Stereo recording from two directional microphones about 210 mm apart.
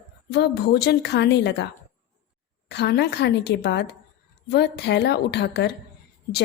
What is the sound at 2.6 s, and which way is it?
A woman's voice, 55° left (ahead or behind).